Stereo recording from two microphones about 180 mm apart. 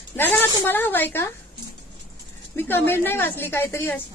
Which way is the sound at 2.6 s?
10° left (ahead or behind).